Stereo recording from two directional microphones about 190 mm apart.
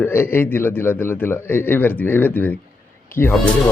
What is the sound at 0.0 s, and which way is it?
A man's voice, 10° left (ahead or behind).